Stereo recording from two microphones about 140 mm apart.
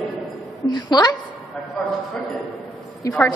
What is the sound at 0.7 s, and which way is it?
Speech, 30° left (ahead or behind).